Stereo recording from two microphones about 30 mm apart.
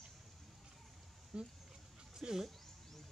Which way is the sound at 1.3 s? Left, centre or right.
Right.